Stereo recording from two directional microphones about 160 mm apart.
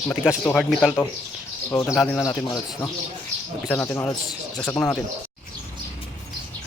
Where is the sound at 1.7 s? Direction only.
20° left (ahead or behind).